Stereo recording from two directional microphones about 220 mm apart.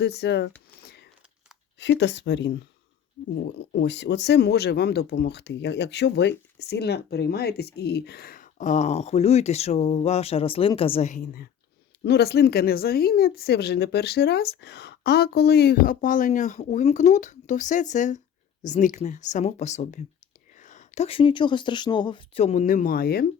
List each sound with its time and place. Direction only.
0.0 s speech: 50° left (ahead or behind)
1.8 s speech: 55° left (ahead or behind)